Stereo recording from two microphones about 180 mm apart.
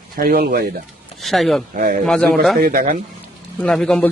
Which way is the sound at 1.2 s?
Centre (ahead or behind).